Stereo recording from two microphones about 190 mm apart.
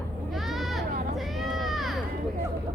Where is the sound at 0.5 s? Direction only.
Centre (ahead or behind).